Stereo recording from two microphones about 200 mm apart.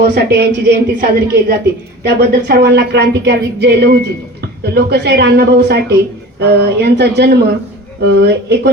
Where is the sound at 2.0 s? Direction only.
55° right (ahead or behind).